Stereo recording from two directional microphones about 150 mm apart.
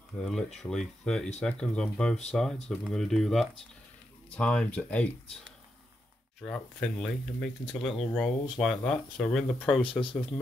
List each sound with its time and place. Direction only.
0.2 s speech: 5° left (ahead or behind)
6.4 s speech: 5° left (ahead or behind)
9.8 s speech: 35° left (ahead or behind)